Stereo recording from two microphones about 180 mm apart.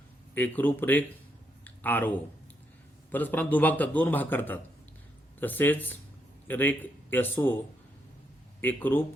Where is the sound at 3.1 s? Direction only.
10° left (ahead or behind).